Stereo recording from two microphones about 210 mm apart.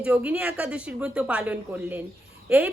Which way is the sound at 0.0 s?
5° right (ahead or behind).